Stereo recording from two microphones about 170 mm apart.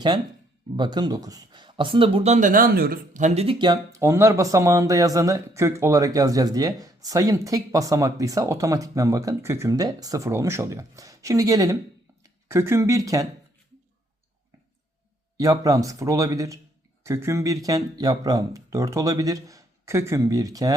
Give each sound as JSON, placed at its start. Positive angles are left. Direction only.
{"t": 0.8, "sound": "speech", "side_deg": -25}
{"t": 4.0, "sound": "speech", "side_deg": -15}
{"t": 15.4, "sound": "speech", "side_deg": -20}